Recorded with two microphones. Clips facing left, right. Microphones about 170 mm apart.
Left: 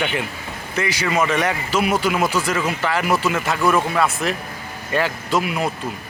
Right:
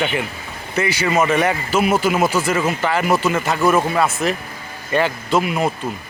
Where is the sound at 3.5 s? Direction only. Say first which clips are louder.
Right 2 dB; 20° right (ahead or behind).